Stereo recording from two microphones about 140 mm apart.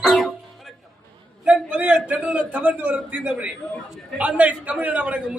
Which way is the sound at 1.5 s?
10° right (ahead or behind).